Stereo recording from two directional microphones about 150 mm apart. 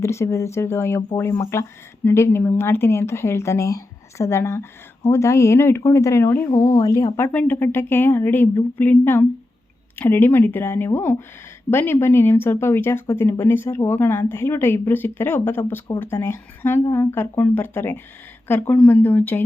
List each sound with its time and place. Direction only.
0.0 s speech: 20° left (ahead or behind)